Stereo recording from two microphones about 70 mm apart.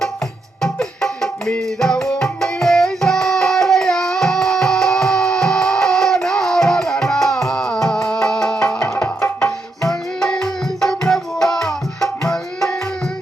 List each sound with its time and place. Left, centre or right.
0.6 s music: centre
9.0 s tabla: left
9.9 s tabla: centre